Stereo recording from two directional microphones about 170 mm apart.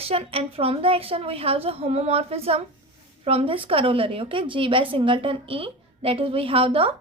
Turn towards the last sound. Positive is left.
turn(degrees=-35)  # may be behind; listen again after turning